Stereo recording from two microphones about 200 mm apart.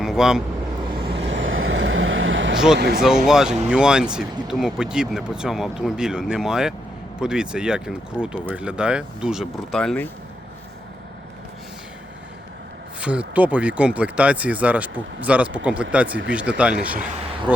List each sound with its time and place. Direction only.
0.0 s speech: centre (ahead or behind)
1.2 s vehicle: 70° right (ahead or behind)
2.7 s speech: 55° right (ahead or behind)
3.2 s speech: 5° right (ahead or behind)
13.0 s speech: 5° right (ahead or behind)
17.1 s a sound: 30° right (ahead or behind)